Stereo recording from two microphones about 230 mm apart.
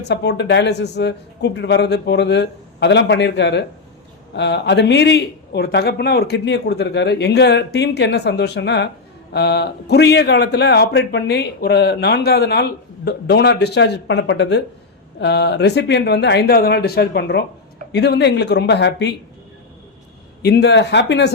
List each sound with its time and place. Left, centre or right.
0.0 s speech: left
20.4 s speech: left